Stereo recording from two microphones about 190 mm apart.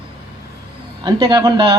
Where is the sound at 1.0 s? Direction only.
25° right (ahead or behind).